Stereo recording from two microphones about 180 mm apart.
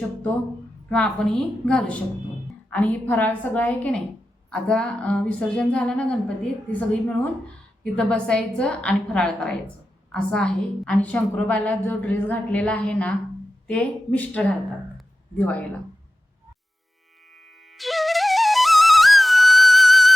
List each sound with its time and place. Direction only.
0.9 s a woman's voice: 5° left (ahead or behind)
14.9 s a sound: 10° left (ahead or behind)
17.7 s flute: centre (ahead or behind)